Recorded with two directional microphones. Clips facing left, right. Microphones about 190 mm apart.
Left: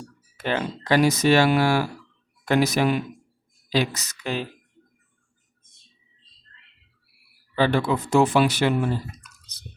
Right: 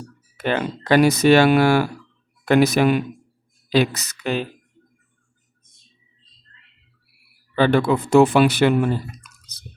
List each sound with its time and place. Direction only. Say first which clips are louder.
0.3 s speech: right 3 dB; 60° right (ahead or behind)
7.5 s speech: right 4 dB; 60° right (ahead or behind)